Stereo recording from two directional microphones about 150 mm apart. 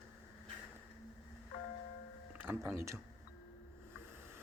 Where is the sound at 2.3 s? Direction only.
15° right (ahead or behind).